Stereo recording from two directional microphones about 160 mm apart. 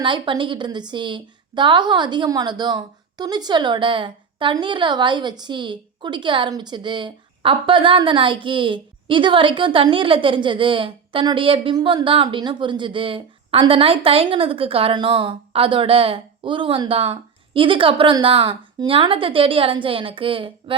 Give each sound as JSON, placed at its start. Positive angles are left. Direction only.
{"t": 0.0, "sound": "a woman's voice", "side_deg": -30}